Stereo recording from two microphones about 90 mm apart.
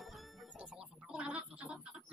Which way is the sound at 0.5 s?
10° right (ahead or behind).